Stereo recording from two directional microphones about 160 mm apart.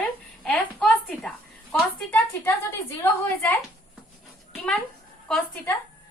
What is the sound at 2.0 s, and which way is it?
A woman's voice, 10° left (ahead or behind).